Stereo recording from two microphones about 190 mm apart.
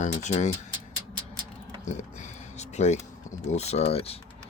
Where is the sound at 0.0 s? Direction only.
40° left (ahead or behind).